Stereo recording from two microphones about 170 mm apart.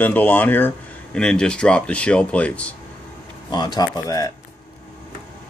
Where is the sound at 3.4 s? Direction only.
25° left (ahead or behind).